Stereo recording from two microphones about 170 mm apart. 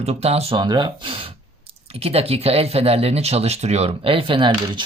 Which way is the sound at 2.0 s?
35° right (ahead or behind).